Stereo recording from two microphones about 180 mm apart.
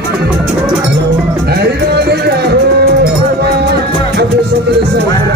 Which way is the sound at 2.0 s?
65° right (ahead or behind).